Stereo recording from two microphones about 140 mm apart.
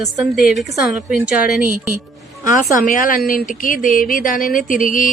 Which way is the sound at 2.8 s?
75° left (ahead or behind).